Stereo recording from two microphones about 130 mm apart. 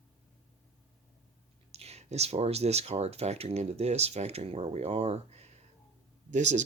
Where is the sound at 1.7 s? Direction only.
55° right (ahead or behind).